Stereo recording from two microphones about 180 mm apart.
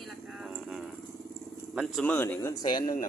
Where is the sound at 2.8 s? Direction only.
45° left (ahead or behind).